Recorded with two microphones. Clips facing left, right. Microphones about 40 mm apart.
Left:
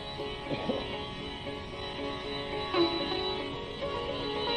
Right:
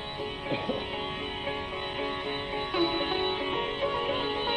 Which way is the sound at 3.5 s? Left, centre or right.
Right.